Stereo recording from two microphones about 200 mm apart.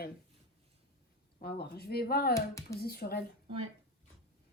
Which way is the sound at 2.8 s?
50° left (ahead or behind).